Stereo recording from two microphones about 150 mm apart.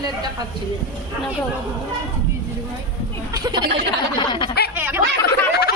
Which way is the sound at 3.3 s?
20° right (ahead or behind).